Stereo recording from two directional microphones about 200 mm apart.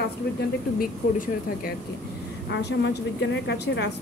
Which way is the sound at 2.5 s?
60° left (ahead or behind).